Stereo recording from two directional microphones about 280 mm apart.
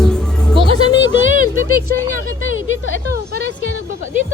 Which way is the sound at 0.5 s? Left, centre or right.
Centre.